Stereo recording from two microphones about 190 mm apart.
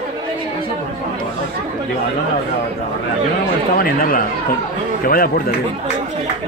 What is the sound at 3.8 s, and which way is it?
A man's voice, 50° left (ahead or behind).